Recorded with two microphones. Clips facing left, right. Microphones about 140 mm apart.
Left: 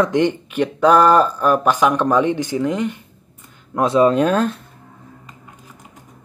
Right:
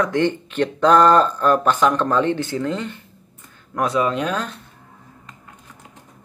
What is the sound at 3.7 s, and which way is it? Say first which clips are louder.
Speech: left 6 dB; 25° left (ahead or behind).